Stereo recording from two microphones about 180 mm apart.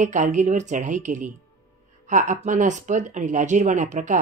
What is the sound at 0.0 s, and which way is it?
Speech, 45° right (ahead or behind).